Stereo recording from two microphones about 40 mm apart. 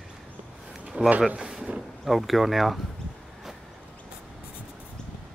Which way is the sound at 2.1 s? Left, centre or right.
Centre.